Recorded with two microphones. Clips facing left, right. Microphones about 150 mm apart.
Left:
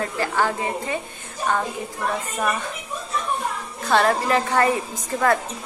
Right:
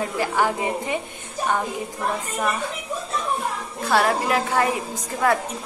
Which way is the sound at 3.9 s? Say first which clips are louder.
Left 1 dB; 5° right (ahead or behind).